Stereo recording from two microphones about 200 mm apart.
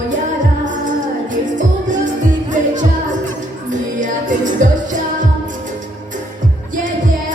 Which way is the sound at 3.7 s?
40° right (ahead or behind).